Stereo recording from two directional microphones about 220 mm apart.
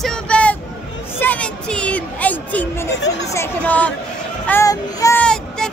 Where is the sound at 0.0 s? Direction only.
5° left (ahead or behind).